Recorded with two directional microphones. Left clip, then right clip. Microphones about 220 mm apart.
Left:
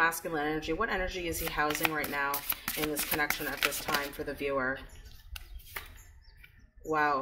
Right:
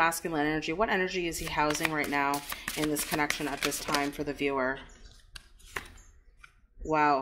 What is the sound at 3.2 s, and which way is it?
Speech, 10° right (ahead or behind).